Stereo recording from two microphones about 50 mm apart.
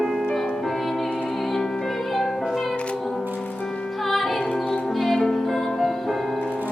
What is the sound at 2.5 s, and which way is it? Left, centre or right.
Music, centre.